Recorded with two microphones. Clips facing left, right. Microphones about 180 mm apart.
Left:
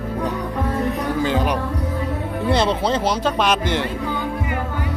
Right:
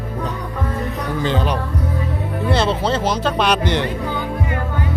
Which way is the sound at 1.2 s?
10° left (ahead or behind).